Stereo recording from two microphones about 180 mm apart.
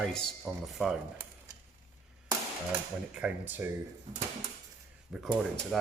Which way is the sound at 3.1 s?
10° right (ahead or behind).